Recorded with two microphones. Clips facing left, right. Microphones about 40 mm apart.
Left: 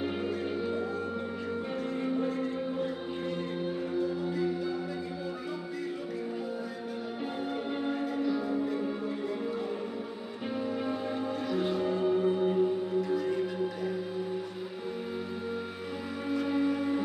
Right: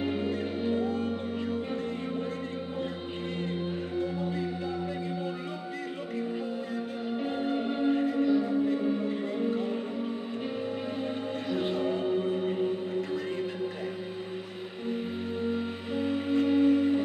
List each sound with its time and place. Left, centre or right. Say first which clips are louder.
0.3 s music: right 2 dB; right
7.2 s music: right 4 dB; right
11.1 s music: even; right
15.5 s music: right 4 dB; right